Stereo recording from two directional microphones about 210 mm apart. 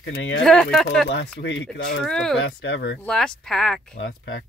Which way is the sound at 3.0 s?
5° left (ahead or behind).